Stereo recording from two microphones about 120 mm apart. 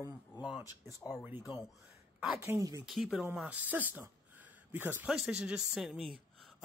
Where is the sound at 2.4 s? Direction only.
25° right (ahead or behind).